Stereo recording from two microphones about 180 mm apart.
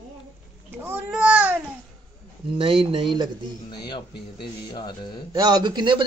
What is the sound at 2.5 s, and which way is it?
Speech, 30° right (ahead or behind).